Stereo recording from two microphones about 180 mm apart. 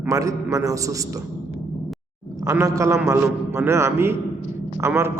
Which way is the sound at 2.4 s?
20° right (ahead or behind).